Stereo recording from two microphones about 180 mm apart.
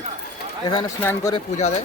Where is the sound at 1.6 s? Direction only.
40° left (ahead or behind).